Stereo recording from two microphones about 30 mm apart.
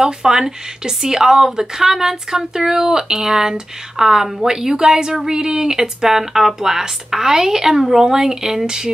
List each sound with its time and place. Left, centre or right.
0.0 s speech: centre